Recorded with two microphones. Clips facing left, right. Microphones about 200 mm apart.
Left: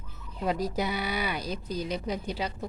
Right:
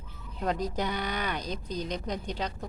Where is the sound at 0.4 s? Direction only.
10° left (ahead or behind).